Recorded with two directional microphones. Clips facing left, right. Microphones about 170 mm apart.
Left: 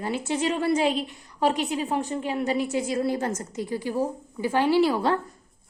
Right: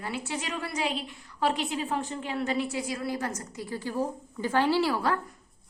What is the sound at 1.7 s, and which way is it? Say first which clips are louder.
A woman's voice: left 4 dB; 20° left (ahead or behind).